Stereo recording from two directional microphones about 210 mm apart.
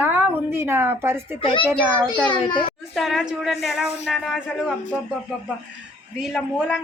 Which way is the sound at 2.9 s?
Centre (ahead or behind).